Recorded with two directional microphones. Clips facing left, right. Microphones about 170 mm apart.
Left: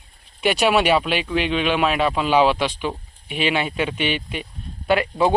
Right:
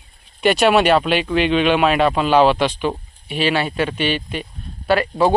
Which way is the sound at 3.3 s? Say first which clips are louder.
Right 3 dB; 20° left (ahead or behind).